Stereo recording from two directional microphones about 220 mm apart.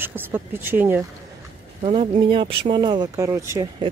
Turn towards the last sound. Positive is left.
turn(degrees=-10)  # may be behind; listen again after turning